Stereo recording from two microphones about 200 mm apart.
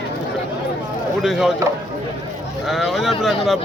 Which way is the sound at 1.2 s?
Centre (ahead or behind).